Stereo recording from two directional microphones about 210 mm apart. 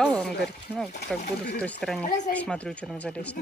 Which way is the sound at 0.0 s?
Centre (ahead or behind).